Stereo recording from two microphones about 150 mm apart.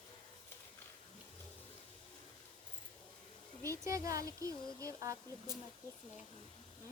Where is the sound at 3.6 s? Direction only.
20° right (ahead or behind).